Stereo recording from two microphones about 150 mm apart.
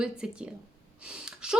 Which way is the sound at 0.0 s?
5° right (ahead or behind).